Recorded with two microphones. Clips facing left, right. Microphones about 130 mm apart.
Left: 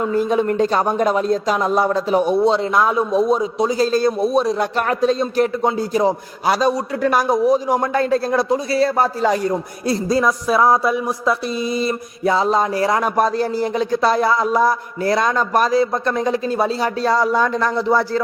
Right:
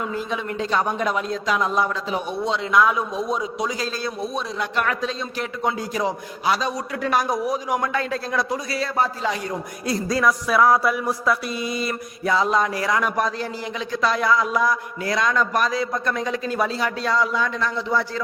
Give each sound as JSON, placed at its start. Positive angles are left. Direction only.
{"t": 0.0, "sound": "a man's voice", "side_deg": 45}
{"t": 7.3, "sound": "a man's voice", "side_deg": 30}